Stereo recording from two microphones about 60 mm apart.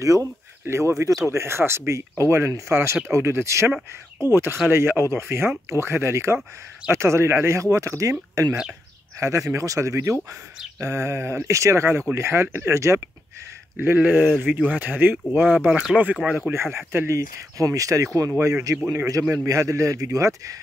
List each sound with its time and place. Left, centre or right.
0.0 s speech: right
0.7 s speech: right
1.3 s speech: right
13.7 s speech: right
16.0 s speech: centre
16.3 s speech: right
16.5 s speech: right
17.4 s speech: right